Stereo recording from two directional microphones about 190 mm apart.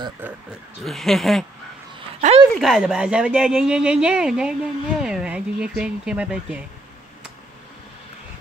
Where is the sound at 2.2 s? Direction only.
35° right (ahead or behind).